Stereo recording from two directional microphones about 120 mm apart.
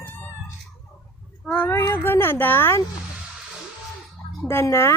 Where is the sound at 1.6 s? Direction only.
20° left (ahead or behind).